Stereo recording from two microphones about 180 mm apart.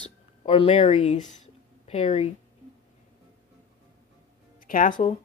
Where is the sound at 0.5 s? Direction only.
35° left (ahead or behind).